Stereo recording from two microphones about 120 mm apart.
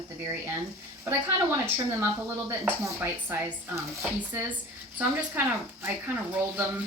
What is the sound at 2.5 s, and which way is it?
Speech, 20° right (ahead or behind).